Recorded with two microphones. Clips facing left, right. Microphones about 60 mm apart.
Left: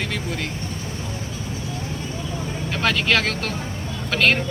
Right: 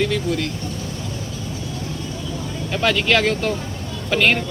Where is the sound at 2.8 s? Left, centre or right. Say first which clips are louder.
Right 3 dB; centre.